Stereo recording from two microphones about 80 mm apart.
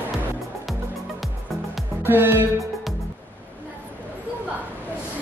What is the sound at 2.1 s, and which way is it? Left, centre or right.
Music, right.